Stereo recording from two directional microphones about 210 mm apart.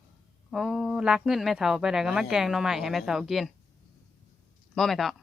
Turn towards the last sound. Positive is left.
turn(degrees=0)  # may be behind; listen again after turning